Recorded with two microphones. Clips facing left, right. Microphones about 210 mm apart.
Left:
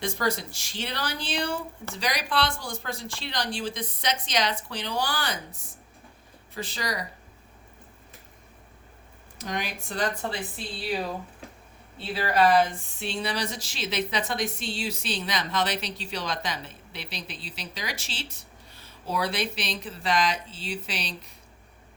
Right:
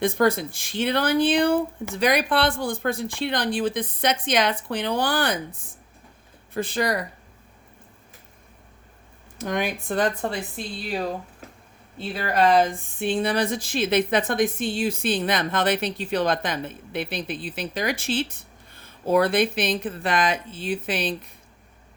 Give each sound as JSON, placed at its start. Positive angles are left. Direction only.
{"t": 0.0, "sound": "speech", "side_deg": -55}
{"t": 9.4, "sound": "speech", "side_deg": -55}
{"t": 11.9, "sound": "speech", "side_deg": -50}